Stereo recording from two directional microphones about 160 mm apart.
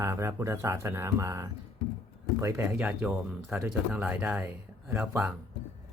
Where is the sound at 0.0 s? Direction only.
15° right (ahead or behind).